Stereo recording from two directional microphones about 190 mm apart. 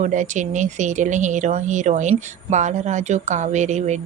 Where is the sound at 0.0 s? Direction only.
40° right (ahead or behind).